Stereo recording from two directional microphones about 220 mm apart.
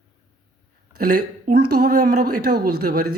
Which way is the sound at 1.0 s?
40° right (ahead or behind).